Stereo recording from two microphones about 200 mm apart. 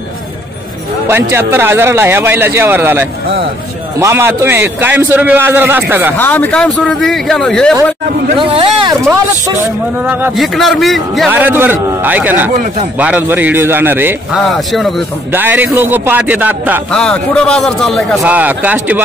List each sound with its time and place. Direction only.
1.0 s a man's voice: 10° right (ahead or behind)
6.1 s a man's voice: 10° left (ahead or behind)
8.4 s speech: 25° right (ahead or behind)
10.0 s a man's voice: 5° right (ahead or behind)
16.9 s a man's voice: 5° left (ahead or behind)